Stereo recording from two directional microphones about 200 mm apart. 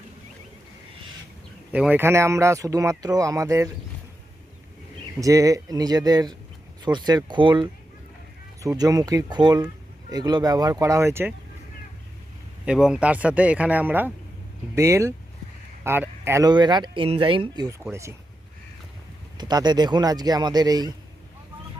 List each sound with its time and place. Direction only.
1.7 s speech: 10° right (ahead or behind)
5.2 s speech: 15° right (ahead or behind)
12.6 s speech: 5° right (ahead or behind)
19.4 s speech: 20° right (ahead or behind)